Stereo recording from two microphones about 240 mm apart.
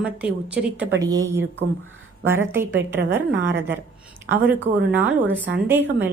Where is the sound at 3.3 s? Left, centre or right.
Right.